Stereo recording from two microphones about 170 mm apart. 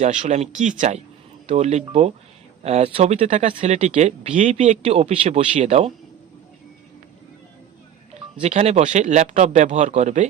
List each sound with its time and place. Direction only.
0.0 s speech: 45° right (ahead or behind)
8.1 s speech: 40° right (ahead or behind)